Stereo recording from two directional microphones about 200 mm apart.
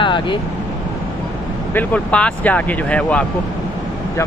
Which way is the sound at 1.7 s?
10° left (ahead or behind).